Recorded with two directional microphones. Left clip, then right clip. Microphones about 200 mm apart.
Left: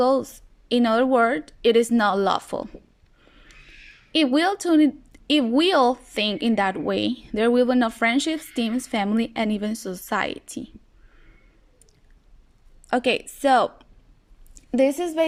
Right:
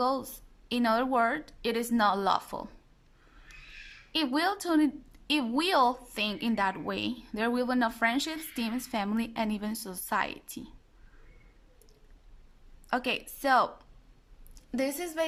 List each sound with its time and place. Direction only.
0.0 s a woman's voice: 15° left (ahead or behind)
3.2 s a sound: 5° left (ahead or behind)
4.1 s a woman's voice: 15° left (ahead or behind)
12.9 s a woman's voice: 20° left (ahead or behind)